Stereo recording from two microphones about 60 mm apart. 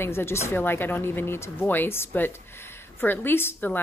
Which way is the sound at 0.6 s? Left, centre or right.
Left.